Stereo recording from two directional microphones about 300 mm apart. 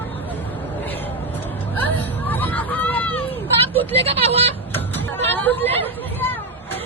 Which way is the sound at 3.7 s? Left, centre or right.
Centre.